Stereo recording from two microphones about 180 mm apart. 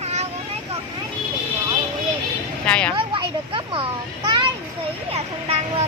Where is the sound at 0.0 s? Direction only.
35° right (ahead or behind).